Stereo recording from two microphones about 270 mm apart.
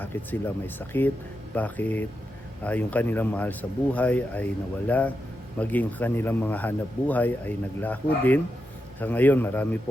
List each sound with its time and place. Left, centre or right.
0.0 s a man's voice: centre